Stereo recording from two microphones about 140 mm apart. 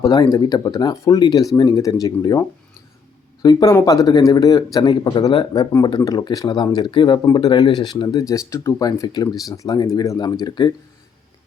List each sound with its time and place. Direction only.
0.0 s speech: 25° left (ahead or behind)